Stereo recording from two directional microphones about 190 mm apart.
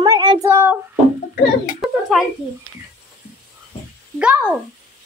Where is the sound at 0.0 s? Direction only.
20° right (ahead or behind).